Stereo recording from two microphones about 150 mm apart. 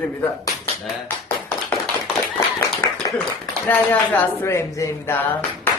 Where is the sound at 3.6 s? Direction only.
10° left (ahead or behind).